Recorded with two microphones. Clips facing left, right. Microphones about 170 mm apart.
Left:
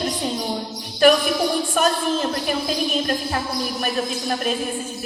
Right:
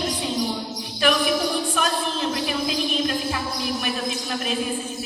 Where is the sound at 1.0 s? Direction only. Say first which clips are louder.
Left 7 dB; 45° left (ahead or behind).